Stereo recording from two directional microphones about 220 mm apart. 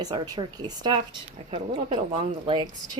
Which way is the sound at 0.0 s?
15° right (ahead or behind).